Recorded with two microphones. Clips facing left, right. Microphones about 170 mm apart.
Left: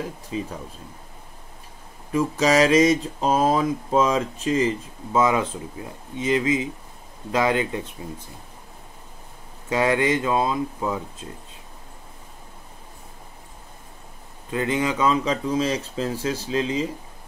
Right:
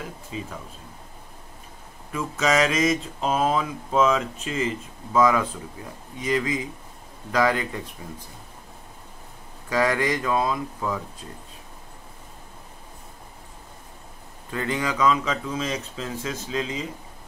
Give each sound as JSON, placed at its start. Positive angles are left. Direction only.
{"t": 2.1, "sound": "mantra", "side_deg": 30}
{"t": 5.1, "sound": "speech", "side_deg": 25}
{"t": 9.7, "sound": "speech", "side_deg": 25}
{"t": 14.5, "sound": "mantra", "side_deg": 20}